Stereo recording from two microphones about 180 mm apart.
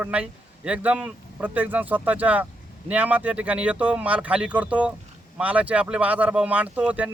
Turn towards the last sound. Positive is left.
turn(degrees=-5)  # may be behind; listen again after turning